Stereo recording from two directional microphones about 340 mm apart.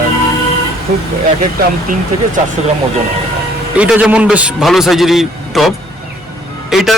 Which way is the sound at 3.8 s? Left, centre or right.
Centre.